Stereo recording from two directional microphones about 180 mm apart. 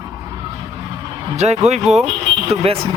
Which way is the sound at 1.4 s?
40° right (ahead or behind).